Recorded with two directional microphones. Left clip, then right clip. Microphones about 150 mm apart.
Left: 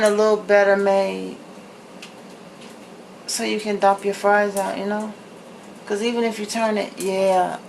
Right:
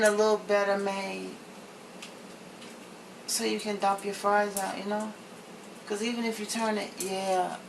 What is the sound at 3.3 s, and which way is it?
Speech, 15° left (ahead or behind).